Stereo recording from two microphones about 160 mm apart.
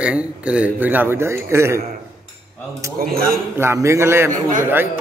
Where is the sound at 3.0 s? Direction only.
65° right (ahead or behind).